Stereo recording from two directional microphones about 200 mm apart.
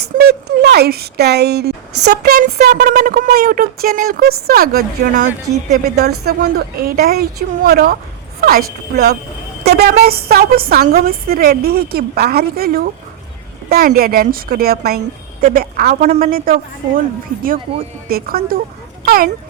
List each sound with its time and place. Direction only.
0.0 s speech: 55° right (ahead or behind)
6.0 s speech: 55° right (ahead or behind)
16.0 s speech: 35° right (ahead or behind)
18.1 s speech: 50° right (ahead or behind)